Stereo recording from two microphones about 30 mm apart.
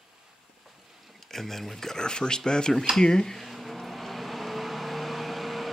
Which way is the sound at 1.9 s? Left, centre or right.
Left.